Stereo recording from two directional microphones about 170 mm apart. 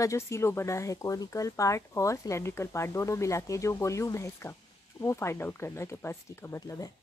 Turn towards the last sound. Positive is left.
turn(degrees=20)  # may be behind; listen again after turning